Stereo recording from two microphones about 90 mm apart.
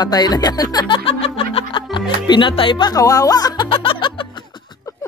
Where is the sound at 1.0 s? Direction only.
90° left; by 2.9 s 65° left (ahead or behind).